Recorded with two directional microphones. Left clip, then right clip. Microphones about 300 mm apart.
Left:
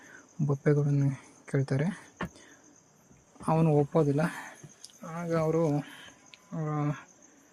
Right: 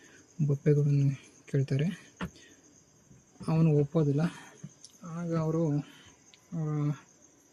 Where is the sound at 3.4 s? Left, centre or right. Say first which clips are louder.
Left 3 dB; centre.